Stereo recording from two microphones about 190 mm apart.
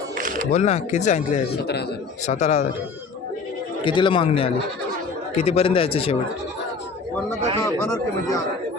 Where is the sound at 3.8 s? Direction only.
25° left (ahead or behind).